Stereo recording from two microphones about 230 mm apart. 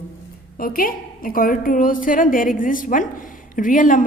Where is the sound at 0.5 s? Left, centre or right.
Left.